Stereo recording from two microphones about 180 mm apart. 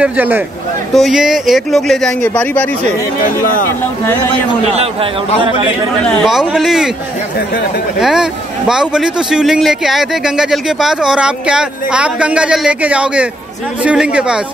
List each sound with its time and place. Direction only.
0.0 s speech: 10° right (ahead or behind); by 2.7 s 10° left (ahead or behind)
3.3 s speech: 50° left (ahead or behind)
6.0 s speech: centre (ahead or behind)
8.0 s speech: 5° right (ahead or behind)